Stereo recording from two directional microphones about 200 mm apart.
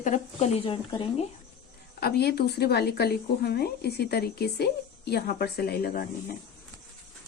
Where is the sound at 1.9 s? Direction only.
50° left (ahead or behind).